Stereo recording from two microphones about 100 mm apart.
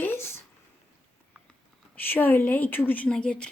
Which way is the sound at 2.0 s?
20° left (ahead or behind).